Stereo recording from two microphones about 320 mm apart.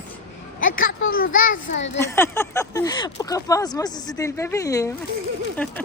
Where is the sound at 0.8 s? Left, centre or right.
Left.